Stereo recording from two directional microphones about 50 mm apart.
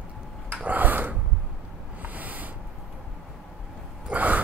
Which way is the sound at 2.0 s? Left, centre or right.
Right.